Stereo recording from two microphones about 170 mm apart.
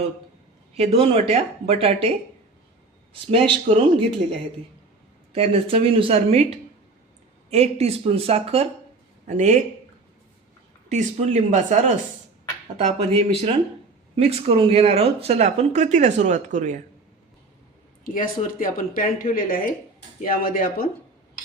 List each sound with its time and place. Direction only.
0.8 s speech: 35° right (ahead or behind)
3.1 s speech: 30° right (ahead or behind)
10.8 s speech: 45° right (ahead or behind)
18.0 s speech: 55° left (ahead or behind)